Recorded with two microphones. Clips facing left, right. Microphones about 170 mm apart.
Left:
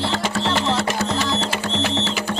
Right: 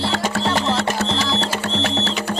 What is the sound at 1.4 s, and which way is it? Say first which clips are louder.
Music: right 1 dB; 35° right (ahead or behind).